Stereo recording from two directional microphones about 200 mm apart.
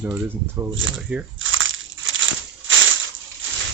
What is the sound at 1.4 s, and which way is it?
Crushing, 75° right (ahead or behind).